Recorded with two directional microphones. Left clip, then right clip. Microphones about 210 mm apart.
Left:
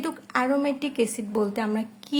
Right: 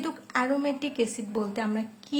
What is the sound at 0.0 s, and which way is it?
A woman's voice, 30° left (ahead or behind).